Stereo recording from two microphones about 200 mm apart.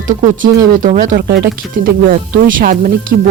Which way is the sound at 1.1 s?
55° right (ahead or behind).